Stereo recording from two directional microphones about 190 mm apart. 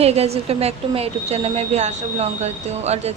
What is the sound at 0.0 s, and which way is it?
A woman's voice, 35° right (ahead or behind).